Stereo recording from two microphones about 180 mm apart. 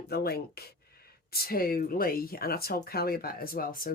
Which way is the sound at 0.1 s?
60° left (ahead or behind).